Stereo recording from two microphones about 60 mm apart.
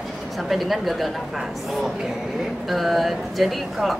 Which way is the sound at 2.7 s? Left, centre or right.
Centre.